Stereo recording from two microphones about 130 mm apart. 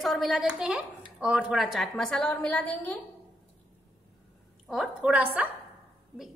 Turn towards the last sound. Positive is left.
turn(degrees=-10)  # may be behind; listen again after turning